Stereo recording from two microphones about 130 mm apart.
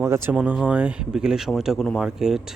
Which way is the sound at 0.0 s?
20° right (ahead or behind).